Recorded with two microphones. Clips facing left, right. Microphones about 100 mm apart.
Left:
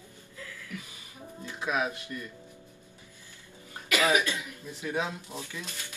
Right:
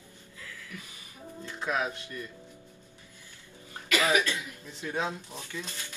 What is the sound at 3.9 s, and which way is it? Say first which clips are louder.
Speech: left 1 dB; 15° left (ahead or behind).